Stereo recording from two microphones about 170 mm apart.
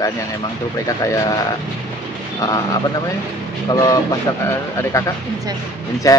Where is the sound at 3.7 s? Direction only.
20° left (ahead or behind).